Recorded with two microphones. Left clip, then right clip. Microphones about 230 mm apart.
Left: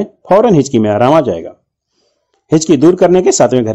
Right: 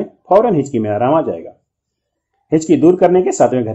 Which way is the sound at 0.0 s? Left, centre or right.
Left.